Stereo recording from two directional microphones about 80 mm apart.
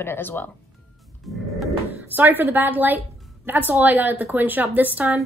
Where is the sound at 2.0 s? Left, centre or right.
Right.